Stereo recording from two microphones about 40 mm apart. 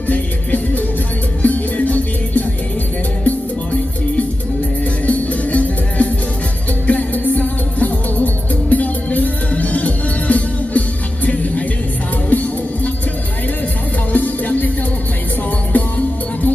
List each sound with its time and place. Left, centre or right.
0.1 s music: left
5.0 s music: left
12.3 s music: left
14.1 s music: left
15.7 s music: left